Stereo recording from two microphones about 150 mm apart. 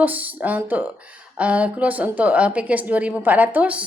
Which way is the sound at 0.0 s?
10° right (ahead or behind).